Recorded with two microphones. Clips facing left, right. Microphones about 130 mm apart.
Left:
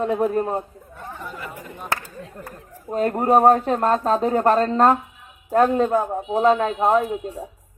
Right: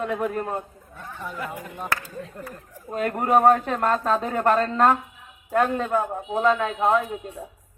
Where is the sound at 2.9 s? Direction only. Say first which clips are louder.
Left 3 dB; 35° left (ahead or behind).